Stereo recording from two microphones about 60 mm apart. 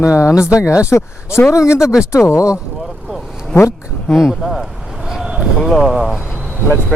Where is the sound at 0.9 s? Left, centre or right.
Left.